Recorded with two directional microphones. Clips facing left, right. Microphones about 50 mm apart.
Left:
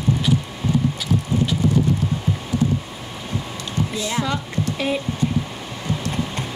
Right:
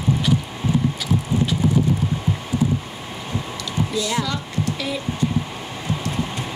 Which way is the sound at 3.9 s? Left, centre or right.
Left.